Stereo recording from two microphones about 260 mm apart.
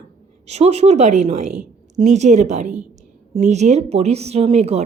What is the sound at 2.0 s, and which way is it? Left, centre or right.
Speech, right.